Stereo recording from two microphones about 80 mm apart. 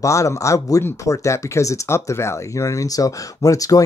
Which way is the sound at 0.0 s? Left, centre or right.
Left.